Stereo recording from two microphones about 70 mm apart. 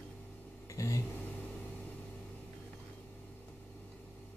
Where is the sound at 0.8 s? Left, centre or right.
Left.